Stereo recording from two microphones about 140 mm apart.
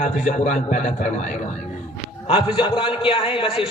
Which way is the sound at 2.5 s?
40° left (ahead or behind).